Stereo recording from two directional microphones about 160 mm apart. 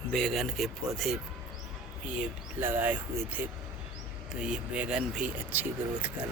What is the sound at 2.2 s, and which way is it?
Speech, 15° right (ahead or behind).